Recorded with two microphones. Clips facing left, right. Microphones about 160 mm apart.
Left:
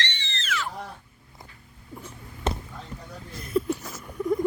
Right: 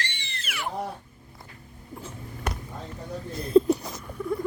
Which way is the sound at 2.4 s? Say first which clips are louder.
Left 4 dB; 25° left (ahead or behind).